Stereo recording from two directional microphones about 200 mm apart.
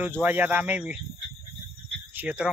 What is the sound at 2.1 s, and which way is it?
Speech, 5° right (ahead or behind).